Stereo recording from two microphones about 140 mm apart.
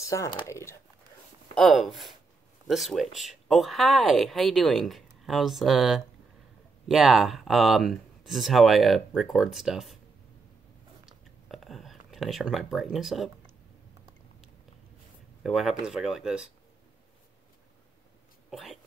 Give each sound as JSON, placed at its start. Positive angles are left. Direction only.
{"t": 0.0, "sound": "speech", "side_deg": 20}
{"t": 1.5, "sound": "speech", "side_deg": 0}
{"t": 11.1, "sound": "a sound", "side_deg": 0}
{"t": 15.4, "sound": "speech", "side_deg": 0}
{"t": 18.5, "sound": "speech", "side_deg": 0}